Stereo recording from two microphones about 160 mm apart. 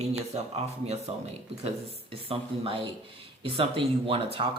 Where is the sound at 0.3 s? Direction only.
45° right (ahead or behind).